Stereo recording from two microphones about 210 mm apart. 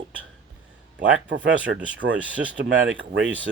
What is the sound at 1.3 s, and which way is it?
Speech, 60° right (ahead or behind).